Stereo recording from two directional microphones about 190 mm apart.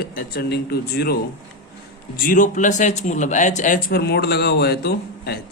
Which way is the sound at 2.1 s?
45° left (ahead or behind).